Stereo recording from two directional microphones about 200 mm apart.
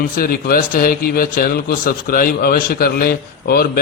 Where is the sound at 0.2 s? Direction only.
50° left (ahead or behind).